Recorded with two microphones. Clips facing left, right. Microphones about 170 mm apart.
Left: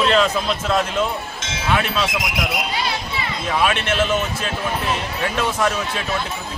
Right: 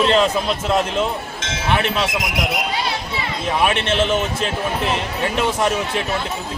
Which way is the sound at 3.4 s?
20° right (ahead or behind).